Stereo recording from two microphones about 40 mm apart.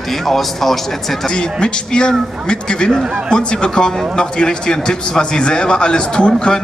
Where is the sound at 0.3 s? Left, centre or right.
Centre.